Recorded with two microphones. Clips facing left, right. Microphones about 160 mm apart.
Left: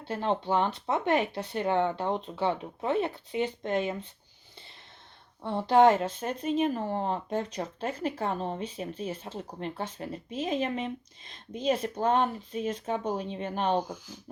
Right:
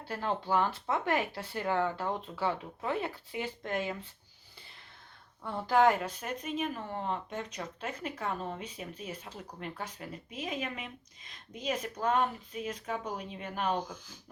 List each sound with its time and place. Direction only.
0.0 s speech: 25° left (ahead or behind)
5.4 s speech: 25° left (ahead or behind)